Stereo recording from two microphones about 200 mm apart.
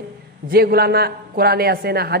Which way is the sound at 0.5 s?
50° right (ahead or behind).